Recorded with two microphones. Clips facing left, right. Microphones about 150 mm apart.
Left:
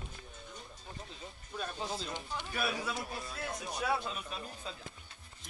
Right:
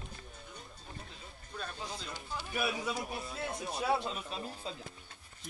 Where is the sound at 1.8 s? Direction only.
25° left (ahead or behind).